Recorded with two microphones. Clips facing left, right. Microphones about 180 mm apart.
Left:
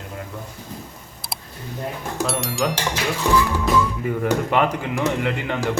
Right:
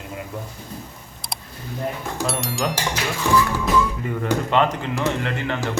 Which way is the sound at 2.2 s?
Centre (ahead or behind).